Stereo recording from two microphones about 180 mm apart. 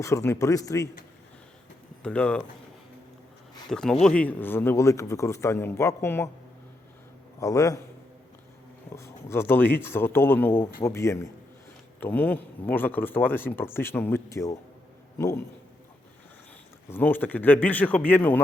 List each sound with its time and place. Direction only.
0.0 s speech: 15° left (ahead or behind)
2.0 s speech: 5° left (ahead or behind)
3.7 s speech: 5° left (ahead or behind)
7.3 s speech: 20° left (ahead or behind)
9.0 s speech: 15° left (ahead or behind)
16.9 s speech: 10° left (ahead or behind)